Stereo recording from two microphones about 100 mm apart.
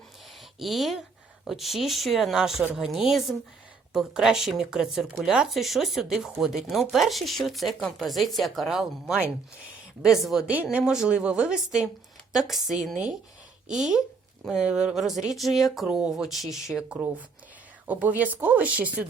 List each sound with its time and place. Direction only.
0.6 s speech: centre (ahead or behind)
10.5 s a woman's voice: 15° right (ahead or behind)
17.8 s a woman's voice: 15° right (ahead or behind)